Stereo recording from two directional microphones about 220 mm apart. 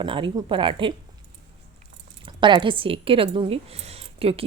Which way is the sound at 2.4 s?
20° right (ahead or behind).